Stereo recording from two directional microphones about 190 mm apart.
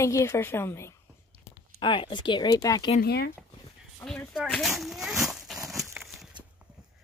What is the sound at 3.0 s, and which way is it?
Speech, 55° left (ahead or behind).